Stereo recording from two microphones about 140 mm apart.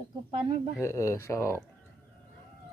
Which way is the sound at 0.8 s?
20° left (ahead or behind).